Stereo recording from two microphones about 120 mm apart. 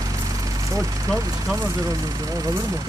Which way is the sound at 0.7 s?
25° right (ahead or behind).